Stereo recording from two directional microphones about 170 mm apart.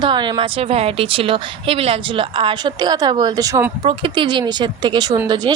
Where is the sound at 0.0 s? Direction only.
25° right (ahead or behind).